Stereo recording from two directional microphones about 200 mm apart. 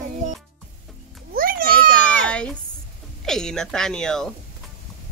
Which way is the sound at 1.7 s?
5° left (ahead or behind).